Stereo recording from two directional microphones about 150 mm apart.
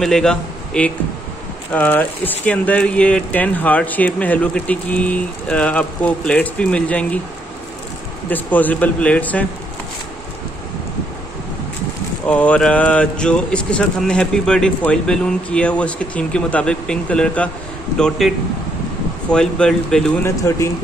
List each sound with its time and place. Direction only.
0.0 s a man's voice: 5° left (ahead or behind)
8.3 s speech: 10° left (ahead or behind)
12.3 s speech: 10° left (ahead or behind)
19.3 s speech: 5° left (ahead or behind)
20.5 s speech: 20° left (ahead or behind)